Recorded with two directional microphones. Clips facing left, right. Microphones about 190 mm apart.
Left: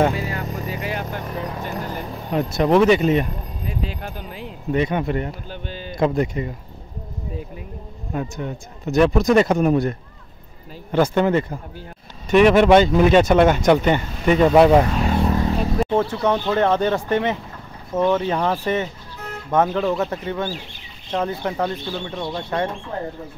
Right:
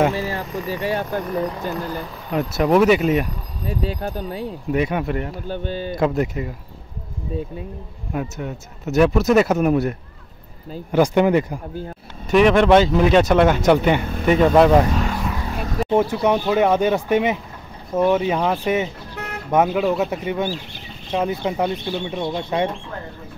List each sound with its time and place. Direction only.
0.1 s vehicle: 35° right (ahead or behind)
0.7 s speech: 35° right (ahead or behind)
2.3 s speech: 5° right (ahead or behind)
3.6 s speech: 35° right (ahead or behind)
4.6 s speech: 10° right (ahead or behind)
5.5 s speech: 45° right (ahead or behind)
5.9 s speech: 5° right (ahead or behind)
8.1 s speech: 5° right (ahead or behind)
12.3 s speech: centre (ahead or behind)
15.0 s vehicle: 25° left (ahead or behind)
15.4 s a sound: 25° left (ahead or behind)
15.9 s speech: 15° right (ahead or behind)
19.1 s vehicle: 70° right (ahead or behind)
19.5 s speech: 10° right (ahead or behind)